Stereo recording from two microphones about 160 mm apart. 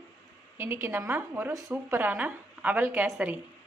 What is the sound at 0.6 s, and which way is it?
A woman's voice, 15° right (ahead or behind).